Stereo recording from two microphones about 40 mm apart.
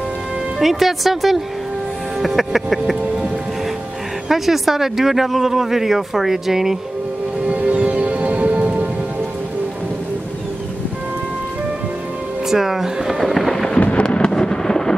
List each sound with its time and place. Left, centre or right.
0.6 s speech: centre
4.3 s speech: centre
7.4 s music: right
12.4 s speech: centre
13.8 s thunder: left